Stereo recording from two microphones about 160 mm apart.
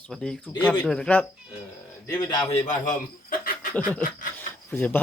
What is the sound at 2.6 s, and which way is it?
Speech, 60° left (ahead or behind).